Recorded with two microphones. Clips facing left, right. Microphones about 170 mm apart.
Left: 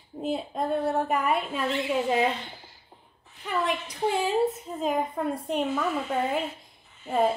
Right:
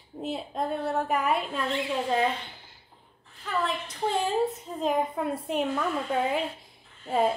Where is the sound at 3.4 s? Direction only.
10° left (ahead or behind).